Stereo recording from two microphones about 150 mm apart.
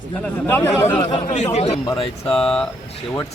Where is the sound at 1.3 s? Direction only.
50° left (ahead or behind).